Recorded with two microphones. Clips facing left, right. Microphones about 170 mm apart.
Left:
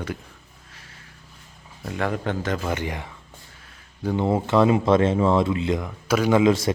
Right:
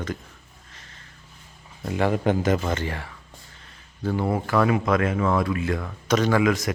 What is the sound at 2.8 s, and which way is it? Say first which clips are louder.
Speech: left 1 dB; 15° left (ahead or behind).